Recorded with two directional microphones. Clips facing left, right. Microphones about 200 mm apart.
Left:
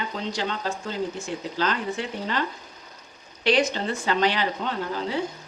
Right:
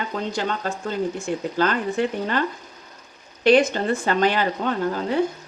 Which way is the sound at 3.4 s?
50° right (ahead or behind).